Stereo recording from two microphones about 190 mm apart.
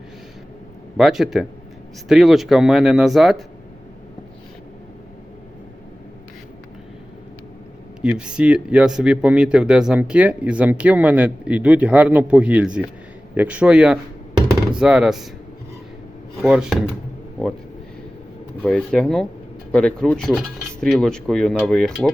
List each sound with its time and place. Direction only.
0.9 s speech: 5° right (ahead or behind)
8.0 s speech: 5° right (ahead or behind)
16.4 s speech: centre (ahead or behind)
18.6 s speech: 5° left (ahead or behind)